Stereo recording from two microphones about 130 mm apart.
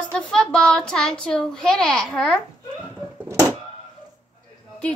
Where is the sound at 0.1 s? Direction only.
5° left (ahead or behind).